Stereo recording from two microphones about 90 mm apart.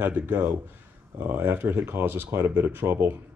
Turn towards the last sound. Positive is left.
turn(degrees=-25)  # may be behind; listen again after turning